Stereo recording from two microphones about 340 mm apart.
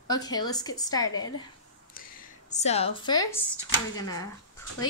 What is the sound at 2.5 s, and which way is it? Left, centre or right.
Speech, centre.